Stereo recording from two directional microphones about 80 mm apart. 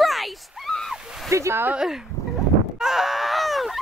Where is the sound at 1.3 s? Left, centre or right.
Right.